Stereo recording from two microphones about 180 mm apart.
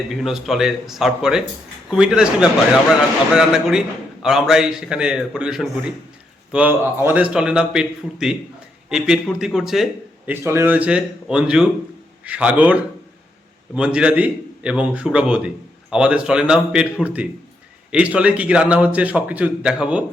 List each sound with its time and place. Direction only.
0.2 s a man's voice: centre (ahead or behind)
10.4 s a man's voice: 15° right (ahead or behind)